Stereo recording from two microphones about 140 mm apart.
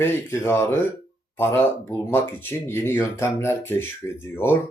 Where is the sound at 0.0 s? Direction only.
15° left (ahead or behind).